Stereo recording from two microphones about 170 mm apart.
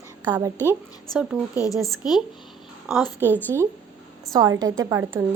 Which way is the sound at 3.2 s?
10° left (ahead or behind).